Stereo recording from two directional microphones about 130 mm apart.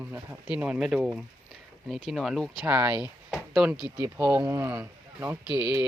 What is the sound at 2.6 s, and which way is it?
Speech, 10° right (ahead or behind).